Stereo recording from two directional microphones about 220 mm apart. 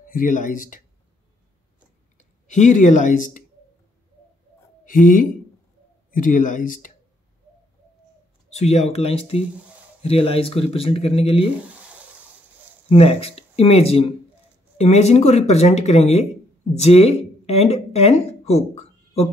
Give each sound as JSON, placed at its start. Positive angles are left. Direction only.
{"t": 0.0, "sound": "speech", "side_deg": 40}
{"t": 2.1, "sound": "speech", "side_deg": 35}
{"t": 4.8, "sound": "speech", "side_deg": 40}
{"t": 8.5, "sound": "speech", "side_deg": 30}
{"t": 12.9, "sound": "speech", "side_deg": 25}
{"t": 17.5, "sound": "a sound", "side_deg": 30}